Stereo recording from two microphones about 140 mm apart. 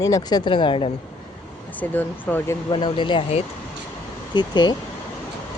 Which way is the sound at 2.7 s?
35° left (ahead or behind).